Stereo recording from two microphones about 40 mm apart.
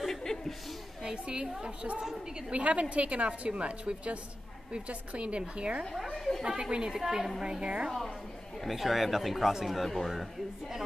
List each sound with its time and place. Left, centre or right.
0.0 s chuckle: centre
1.0 s a woman's voice: right
2.5 s a woman's voice: right
6.1 s chatter: centre
6.4 s a woman's voice: right
8.6 s speech: centre
9.8 s speech: centre